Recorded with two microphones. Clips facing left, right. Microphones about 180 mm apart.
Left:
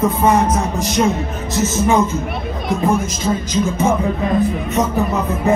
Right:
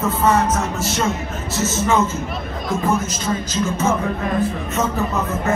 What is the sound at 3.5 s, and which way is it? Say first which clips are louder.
Speech: left 3 dB; 15° left (ahead or behind).